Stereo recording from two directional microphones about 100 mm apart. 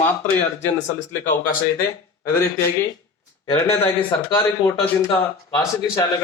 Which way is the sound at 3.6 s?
25° left (ahead or behind).